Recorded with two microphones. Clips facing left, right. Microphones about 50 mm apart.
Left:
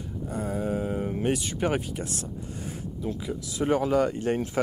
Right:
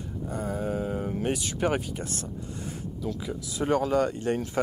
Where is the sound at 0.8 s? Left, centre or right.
Centre.